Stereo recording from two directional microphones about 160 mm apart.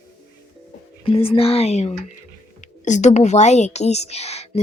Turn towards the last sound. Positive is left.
turn(degrees=40)  # may be behind; listen again after turning